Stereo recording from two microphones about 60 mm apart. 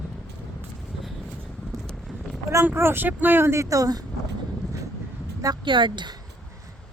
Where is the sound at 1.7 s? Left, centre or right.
Right.